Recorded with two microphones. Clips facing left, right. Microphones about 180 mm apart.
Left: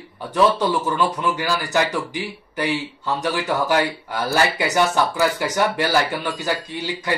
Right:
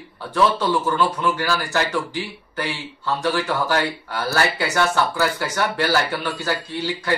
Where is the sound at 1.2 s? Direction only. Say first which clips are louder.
Even; 15° left (ahead or behind).